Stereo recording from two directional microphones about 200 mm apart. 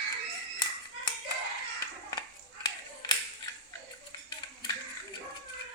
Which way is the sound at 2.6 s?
20° left (ahead or behind).